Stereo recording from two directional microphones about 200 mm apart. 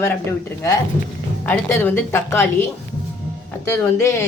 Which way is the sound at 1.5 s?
5° left (ahead or behind).